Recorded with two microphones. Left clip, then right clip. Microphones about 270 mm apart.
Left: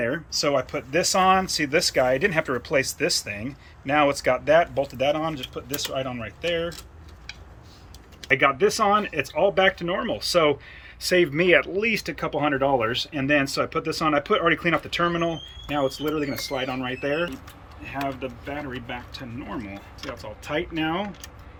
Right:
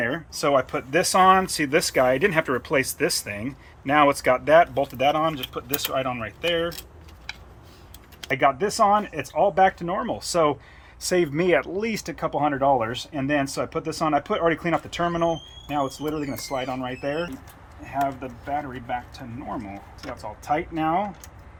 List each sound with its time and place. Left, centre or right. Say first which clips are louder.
0.0 s speech: even; centre
8.3 s speech: left 2 dB; centre
18.4 s speech: right 8 dB; centre
20.8 s speech: right 4 dB; centre